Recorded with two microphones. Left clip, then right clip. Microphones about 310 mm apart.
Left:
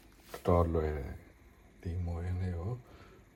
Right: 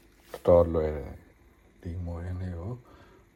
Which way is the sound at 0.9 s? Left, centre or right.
Right.